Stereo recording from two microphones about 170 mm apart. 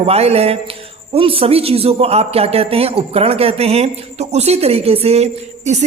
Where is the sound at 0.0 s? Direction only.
35° right (ahead or behind).